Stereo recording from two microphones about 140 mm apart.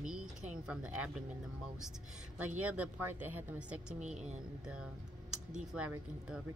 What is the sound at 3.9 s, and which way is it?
Speech, 55° right (ahead or behind).